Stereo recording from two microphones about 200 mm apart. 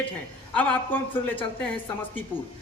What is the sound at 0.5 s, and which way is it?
A woman's voice, 5° left (ahead or behind).